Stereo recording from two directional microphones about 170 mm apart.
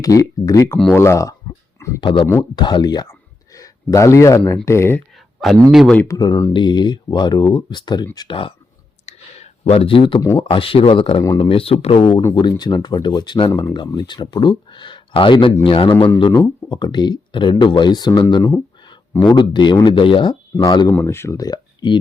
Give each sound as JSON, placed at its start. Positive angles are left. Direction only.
{"t": 0.0, "sound": "speech", "side_deg": 20}
{"t": 2.0, "sound": "speech", "side_deg": 30}
{"t": 5.1, "sound": "a sound", "side_deg": 0}
{"t": 5.7, "sound": "speech", "side_deg": 0}
{"t": 6.0, "sound": "speech", "side_deg": 20}
{"t": 9.0, "sound": "clicking", "side_deg": 40}
{"t": 10.2, "sound": "speech", "side_deg": 20}
{"t": 10.4, "sound": "speech", "side_deg": 30}
{"t": 20.9, "sound": "speech", "side_deg": 15}